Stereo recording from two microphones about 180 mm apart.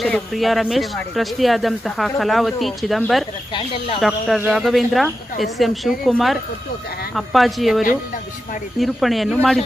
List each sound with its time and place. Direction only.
0.0 s speech: centre (ahead or behind)
3.5 s speech: 30° left (ahead or behind)
4.5 s speech: centre (ahead or behind)